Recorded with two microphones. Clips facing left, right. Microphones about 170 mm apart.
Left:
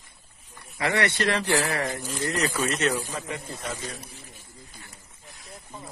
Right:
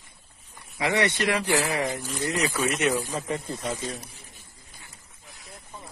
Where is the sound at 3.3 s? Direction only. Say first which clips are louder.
Right 4 dB; 30° right (ahead or behind).